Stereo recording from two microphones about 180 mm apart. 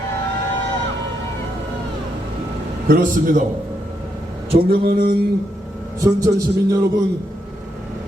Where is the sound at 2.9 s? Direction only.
50° right (ahead or behind).